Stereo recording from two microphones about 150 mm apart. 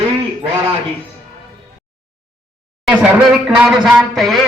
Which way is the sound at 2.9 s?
5° right (ahead or behind).